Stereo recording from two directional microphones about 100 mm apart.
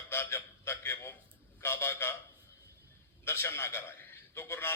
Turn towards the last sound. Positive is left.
turn(degrees=25)  # may be behind; listen again after turning